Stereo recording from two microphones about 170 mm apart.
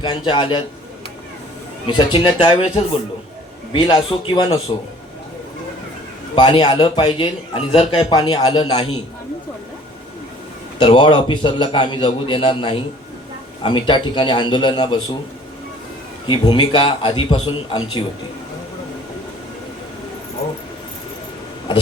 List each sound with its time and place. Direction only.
0.0 s a man's voice: 30° left (ahead or behind)
1.9 s a man's voice: 30° left (ahead or behind)
6.3 s a man's voice: 30° left (ahead or behind)
10.8 s a man's voice: 30° left (ahead or behind)
16.2 s a man's voice: 30° left (ahead or behind)